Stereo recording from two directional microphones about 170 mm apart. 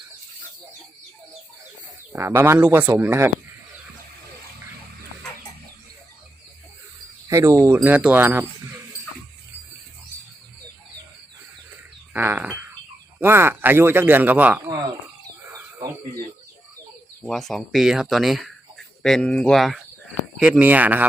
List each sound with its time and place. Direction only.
2.1 s a man's voice: 15° right (ahead or behind)
7.3 s a man's voice: 15° right (ahead or behind)
12.1 s a man's voice: 10° right (ahead or behind)
17.2 s a man's voice: centre (ahead or behind)